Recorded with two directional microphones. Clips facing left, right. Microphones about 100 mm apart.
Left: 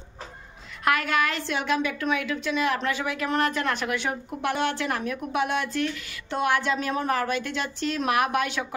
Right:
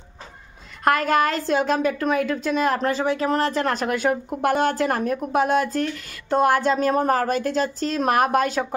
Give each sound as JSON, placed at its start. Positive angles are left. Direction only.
{"t": 0.8, "sound": "a woman's voice", "side_deg": -40}